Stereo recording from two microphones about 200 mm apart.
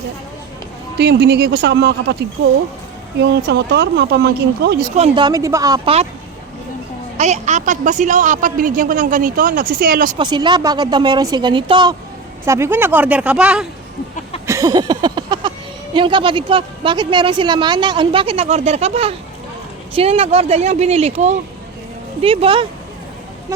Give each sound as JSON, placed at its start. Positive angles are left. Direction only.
{"t": 0.9, "sound": "speech", "side_deg": -60}
{"t": 3.2, "sound": "speech", "side_deg": -60}
{"t": 4.9, "sound": "speech", "side_deg": -25}
{"t": 7.2, "sound": "speech", "side_deg": -35}
{"t": 10.2, "sound": "speech", "side_deg": -20}
{"t": 12.5, "sound": "speech", "side_deg": -10}
{"t": 14.4, "sound": "speech", "side_deg": -15}
{"t": 23.5, "sound": "speech", "side_deg": -15}